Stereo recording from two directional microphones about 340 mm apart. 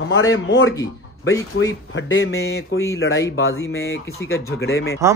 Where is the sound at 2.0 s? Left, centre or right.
Left.